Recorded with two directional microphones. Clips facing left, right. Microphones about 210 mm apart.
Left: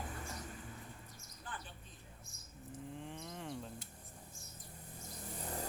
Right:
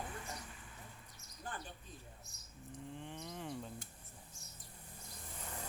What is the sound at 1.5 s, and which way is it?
Bird, 40° right (ahead or behind).